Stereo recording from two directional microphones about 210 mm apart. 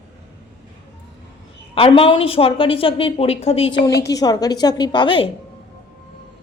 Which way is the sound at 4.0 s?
15° left (ahead or behind).